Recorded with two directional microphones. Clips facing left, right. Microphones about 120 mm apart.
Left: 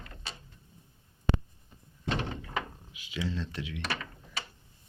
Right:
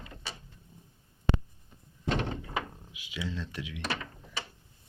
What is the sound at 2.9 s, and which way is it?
Speech, 10° right (ahead or behind).